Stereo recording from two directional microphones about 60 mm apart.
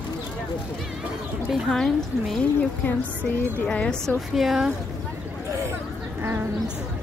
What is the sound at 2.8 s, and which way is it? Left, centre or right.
Speech, left.